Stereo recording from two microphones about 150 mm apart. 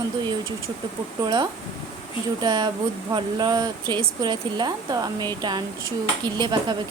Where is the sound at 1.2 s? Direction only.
25° right (ahead or behind).